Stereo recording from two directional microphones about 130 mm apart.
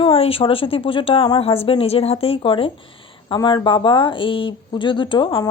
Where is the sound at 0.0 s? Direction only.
45° left (ahead or behind).